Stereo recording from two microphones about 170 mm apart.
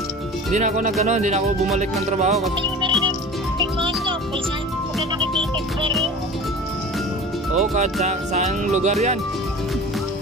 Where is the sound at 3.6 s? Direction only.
30° right (ahead or behind).